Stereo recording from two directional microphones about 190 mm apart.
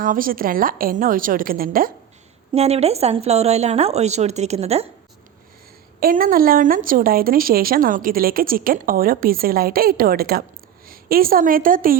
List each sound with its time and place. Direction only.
0.0 s speech: 45° right (ahead or behind)
2.5 s speech: 30° right (ahead or behind)
6.0 s a woman's voice: 50° right (ahead or behind)